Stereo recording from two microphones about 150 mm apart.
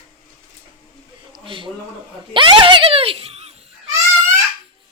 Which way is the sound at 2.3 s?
35° right (ahead or behind).